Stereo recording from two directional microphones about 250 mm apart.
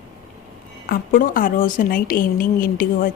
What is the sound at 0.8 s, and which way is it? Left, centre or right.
Speech, left.